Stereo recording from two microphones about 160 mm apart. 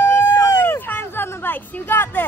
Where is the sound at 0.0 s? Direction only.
15° left (ahead or behind).